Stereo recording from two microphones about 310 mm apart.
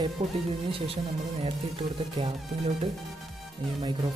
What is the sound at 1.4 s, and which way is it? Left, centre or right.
Music, centre.